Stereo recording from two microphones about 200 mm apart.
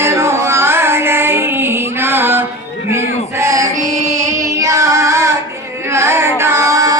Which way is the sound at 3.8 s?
35° right (ahead or behind).